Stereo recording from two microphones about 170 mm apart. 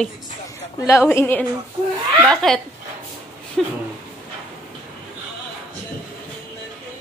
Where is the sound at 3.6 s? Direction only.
Centre (ahead or behind).